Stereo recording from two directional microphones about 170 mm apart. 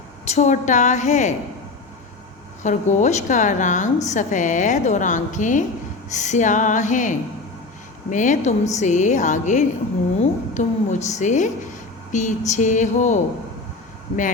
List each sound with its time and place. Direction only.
0.3 s a woman's voice: 45° left (ahead or behind)
2.6 s a woman's voice: 45° left (ahead or behind)